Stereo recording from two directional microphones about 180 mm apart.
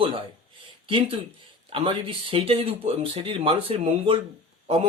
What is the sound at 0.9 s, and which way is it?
Speech, 30° right (ahead or behind).